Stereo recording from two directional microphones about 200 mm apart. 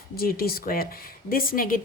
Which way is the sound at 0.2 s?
50° left (ahead or behind).